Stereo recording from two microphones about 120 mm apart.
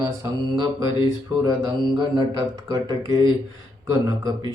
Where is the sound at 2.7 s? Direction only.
30° right (ahead or behind).